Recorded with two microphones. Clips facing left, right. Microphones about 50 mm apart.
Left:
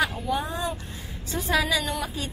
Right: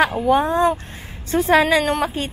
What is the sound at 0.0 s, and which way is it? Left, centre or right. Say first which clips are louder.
A woman's voice: right 10 dB; right.